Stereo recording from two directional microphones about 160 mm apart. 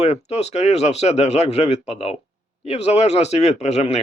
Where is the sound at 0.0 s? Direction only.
40° left (ahead or behind).